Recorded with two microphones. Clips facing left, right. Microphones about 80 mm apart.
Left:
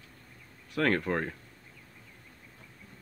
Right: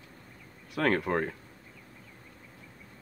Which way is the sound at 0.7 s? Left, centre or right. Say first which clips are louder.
Right 1 dB; centre.